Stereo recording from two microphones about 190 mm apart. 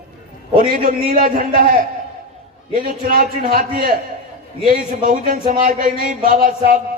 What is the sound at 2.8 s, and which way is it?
Speech, 45° right (ahead or behind).